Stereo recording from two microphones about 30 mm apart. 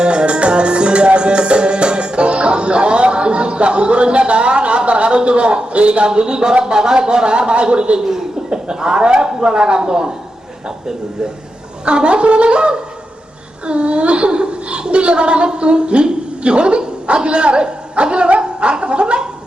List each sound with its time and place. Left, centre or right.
0.0 s music: right
6.1 s a woman's voice: right
7.9 s a man's voice: centre
11.9 s a woman's voice: right